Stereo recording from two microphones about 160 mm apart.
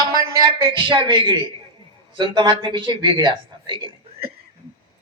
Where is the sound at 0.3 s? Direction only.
30° right (ahead or behind).